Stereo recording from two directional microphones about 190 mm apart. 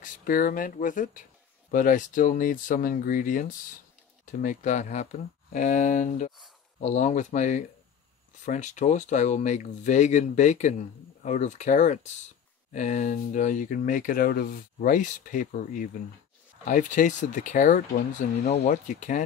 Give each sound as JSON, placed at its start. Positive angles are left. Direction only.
{"t": 0.0, "sound": "speech", "side_deg": 45}